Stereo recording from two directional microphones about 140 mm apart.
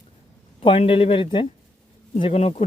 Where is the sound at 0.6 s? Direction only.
40° left (ahead or behind).